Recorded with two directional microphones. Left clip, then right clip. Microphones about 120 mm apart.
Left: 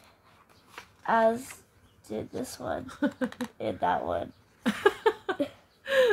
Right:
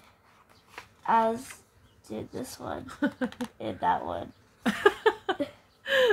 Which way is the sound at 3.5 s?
35° left (ahead or behind).